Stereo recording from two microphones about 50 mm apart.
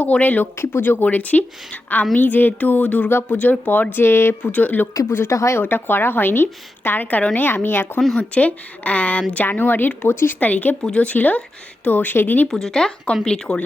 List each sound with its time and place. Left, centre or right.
0.0 s speech: left
0.5 s speech: left
0.8 s speech: left
4.5 s speech: left
5.3 s speech: left
5.6 s speech: left
8.2 s speech: left
10.8 s speech: centre
11.1 s speech: left
12.5 s speech: centre